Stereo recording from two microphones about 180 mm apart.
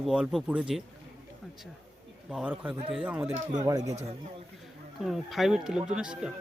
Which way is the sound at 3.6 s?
20° right (ahead or behind).